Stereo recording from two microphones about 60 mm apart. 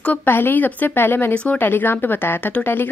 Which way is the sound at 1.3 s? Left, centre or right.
Centre.